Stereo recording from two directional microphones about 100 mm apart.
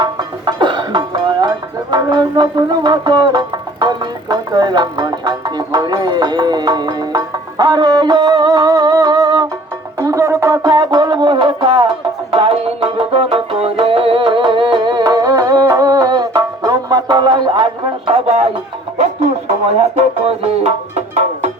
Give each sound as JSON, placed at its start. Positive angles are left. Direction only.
{"t": 0.0, "sound": "music", "side_deg": -50}
{"t": 19.6, "sound": "speech", "side_deg": -85}